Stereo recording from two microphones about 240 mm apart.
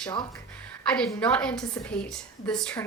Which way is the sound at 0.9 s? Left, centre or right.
Centre.